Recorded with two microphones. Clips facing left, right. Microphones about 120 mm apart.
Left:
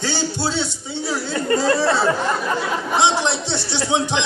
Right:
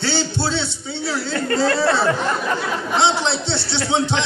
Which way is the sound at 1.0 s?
20° left (ahead or behind).